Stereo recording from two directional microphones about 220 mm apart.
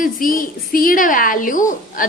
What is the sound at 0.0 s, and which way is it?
A woman's voice, 40° left (ahead or behind).